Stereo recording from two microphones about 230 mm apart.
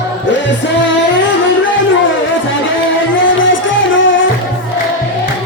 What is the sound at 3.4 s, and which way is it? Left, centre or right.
Music, left.